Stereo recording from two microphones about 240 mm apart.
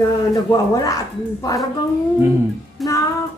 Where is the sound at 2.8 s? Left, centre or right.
Centre.